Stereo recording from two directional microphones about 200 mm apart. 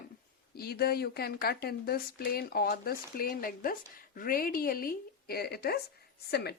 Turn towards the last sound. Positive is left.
turn(degrees=55)  # may be behind; listen again after turning